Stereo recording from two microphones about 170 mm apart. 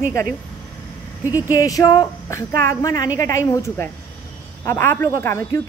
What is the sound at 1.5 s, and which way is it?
A woman's voice, 20° left (ahead or behind).